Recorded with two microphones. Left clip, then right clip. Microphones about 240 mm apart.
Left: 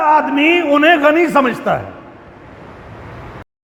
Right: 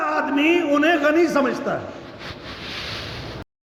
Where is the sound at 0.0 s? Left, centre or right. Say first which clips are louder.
Left 9 dB; left.